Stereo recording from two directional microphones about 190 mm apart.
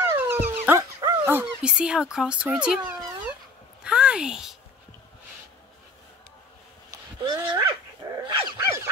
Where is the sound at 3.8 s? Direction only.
5° right (ahead or behind).